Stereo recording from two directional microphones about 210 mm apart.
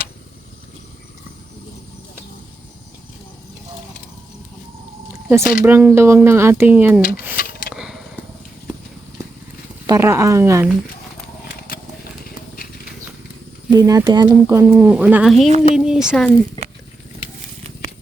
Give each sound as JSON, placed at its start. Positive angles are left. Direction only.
{"t": 5.4, "sound": "speech", "side_deg": 45}
{"t": 5.6, "sound": "speech", "side_deg": -10}
{"t": 7.3, "sound": "a sound", "side_deg": 45}
{"t": 7.7, "sound": "a sound", "side_deg": -5}
{"t": 9.8, "sound": "speech", "side_deg": -15}
{"t": 13.7, "sound": "speech", "side_deg": -15}